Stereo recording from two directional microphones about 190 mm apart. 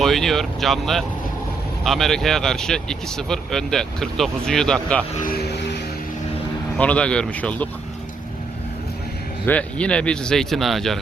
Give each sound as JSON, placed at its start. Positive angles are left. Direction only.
{"t": 0.0, "sound": "speech", "side_deg": 0}
{"t": 5.2, "sound": "vehicle", "side_deg": 55}
{"t": 6.7, "sound": "speech", "side_deg": 5}
{"t": 9.5, "sound": "speech", "side_deg": 5}